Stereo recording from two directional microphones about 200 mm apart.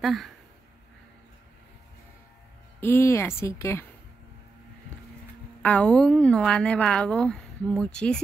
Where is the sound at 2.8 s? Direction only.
10° left (ahead or behind).